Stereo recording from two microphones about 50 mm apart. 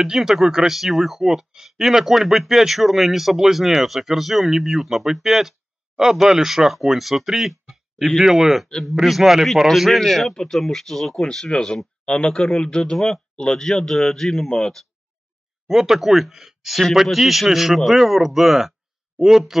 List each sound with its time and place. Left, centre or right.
0.0 s speech: centre
15.6 s speech: centre